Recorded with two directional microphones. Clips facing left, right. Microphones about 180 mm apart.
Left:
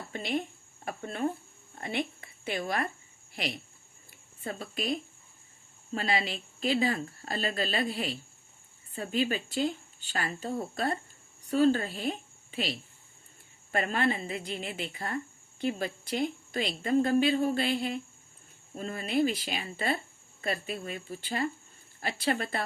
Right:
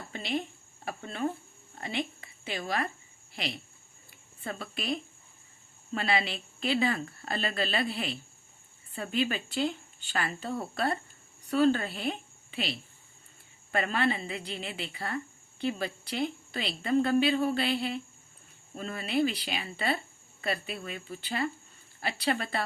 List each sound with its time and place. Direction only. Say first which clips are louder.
0.1 s a woman's voice: left 1 dB; 50° left (ahead or behind)
4.4 s a woman's voice: left 1 dB; 40° left (ahead or behind)
13.7 s a woman's voice: even; 45° left (ahead or behind)